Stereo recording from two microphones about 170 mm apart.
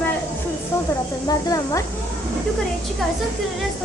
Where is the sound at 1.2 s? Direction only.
20° left (ahead or behind).